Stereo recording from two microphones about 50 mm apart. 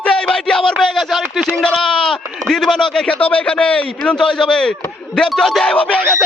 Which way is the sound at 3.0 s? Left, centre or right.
Left.